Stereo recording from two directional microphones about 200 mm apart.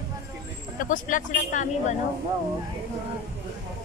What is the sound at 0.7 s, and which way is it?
Speech, 40° left (ahead or behind).